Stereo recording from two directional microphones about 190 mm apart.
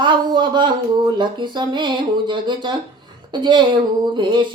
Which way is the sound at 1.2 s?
25° right (ahead or behind).